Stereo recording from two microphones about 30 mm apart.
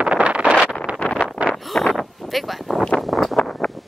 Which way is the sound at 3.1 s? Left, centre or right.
Centre.